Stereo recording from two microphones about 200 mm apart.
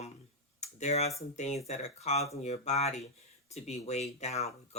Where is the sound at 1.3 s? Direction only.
35° left (ahead or behind).